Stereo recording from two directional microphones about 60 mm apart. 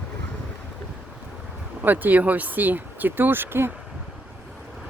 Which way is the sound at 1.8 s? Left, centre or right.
Right.